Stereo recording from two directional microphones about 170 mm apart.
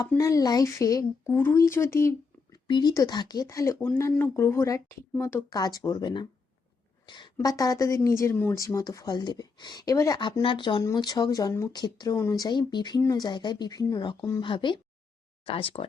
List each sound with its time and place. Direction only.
0.2 s a woman's voice: 20° left (ahead or behind)
7.0 s a sound: 25° left (ahead or behind)
7.3 s a woman's voice: 20° left (ahead or behind)